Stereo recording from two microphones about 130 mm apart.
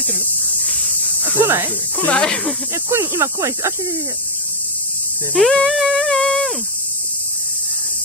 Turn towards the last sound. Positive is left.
turn(degrees=0)  # may be behind; listen again after turning